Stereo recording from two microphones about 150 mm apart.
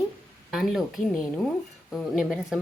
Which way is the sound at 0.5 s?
Centre (ahead or behind).